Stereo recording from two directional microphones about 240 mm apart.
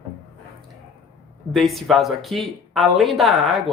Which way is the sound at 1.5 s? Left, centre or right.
Centre.